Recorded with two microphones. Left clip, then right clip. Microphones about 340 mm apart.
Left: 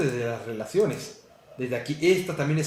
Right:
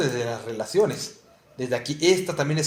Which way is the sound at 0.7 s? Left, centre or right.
Right.